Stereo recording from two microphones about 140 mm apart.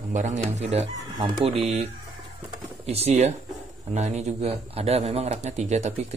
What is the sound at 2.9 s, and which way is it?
A man's voice, 50° right (ahead or behind).